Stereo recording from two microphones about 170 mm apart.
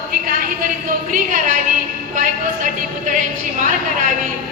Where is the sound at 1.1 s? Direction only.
50° right (ahead or behind).